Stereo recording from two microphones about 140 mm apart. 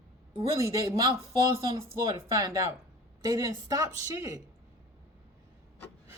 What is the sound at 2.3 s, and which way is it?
Speech, 25° right (ahead or behind).